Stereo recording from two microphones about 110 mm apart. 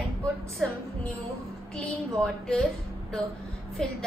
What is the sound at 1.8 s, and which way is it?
A woman's voice, 5° left (ahead or behind).